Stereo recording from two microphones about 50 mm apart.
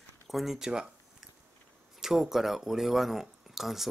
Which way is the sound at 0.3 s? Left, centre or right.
Centre.